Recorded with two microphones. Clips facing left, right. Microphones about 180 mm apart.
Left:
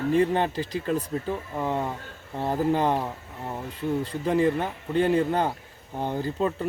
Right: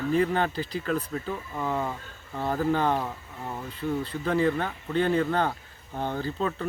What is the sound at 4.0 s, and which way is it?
Speech, 15° left (ahead or behind).